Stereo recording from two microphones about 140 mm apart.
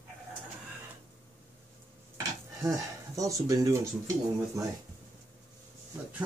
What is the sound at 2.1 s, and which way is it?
Speech, 25° right (ahead or behind).